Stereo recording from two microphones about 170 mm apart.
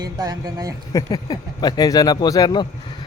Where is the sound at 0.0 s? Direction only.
20° right (ahead or behind).